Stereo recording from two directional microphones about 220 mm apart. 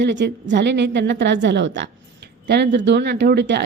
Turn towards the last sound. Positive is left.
turn(degrees=-50)  # may be behind; listen again after turning